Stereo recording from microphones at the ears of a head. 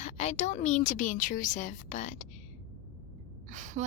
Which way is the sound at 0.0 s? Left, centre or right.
Left.